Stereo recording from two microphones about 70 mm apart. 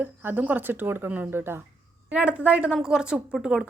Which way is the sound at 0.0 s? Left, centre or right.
Right.